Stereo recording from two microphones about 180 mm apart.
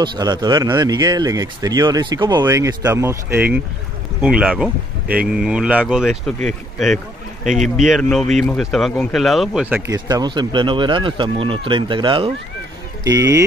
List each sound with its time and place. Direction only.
0.0 s speech: 25° right (ahead or behind); by 7.0 s centre (ahead or behind)
7.5 s speech: 45° right (ahead or behind)
7.8 s speech: centre (ahead or behind)
9.9 s speech: 20° right (ahead or behind)